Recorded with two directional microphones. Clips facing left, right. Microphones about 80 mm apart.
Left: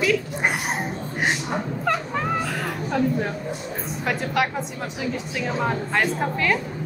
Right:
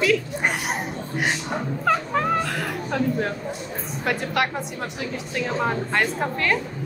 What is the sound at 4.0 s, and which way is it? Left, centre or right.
A woman's voice, centre.